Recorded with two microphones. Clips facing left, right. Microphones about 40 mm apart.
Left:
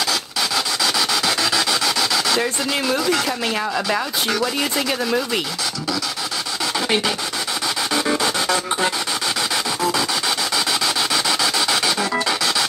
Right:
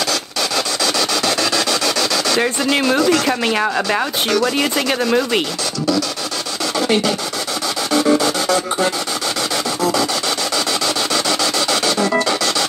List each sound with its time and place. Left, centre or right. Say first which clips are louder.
0.8 s dog: right 2 dB; centre
2.4 s speech: right 5 dB; right
3.0 s speech: right 5 dB; centre
3.3 s speech: right 5 dB; right
8.2 s music: right 3 dB; centre
11.2 s dog: right 2 dB; centre